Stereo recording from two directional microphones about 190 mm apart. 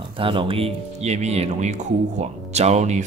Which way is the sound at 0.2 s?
25° right (ahead or behind).